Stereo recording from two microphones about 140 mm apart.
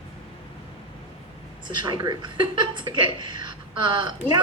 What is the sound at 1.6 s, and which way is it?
A woman's voice, 35° right (ahead or behind).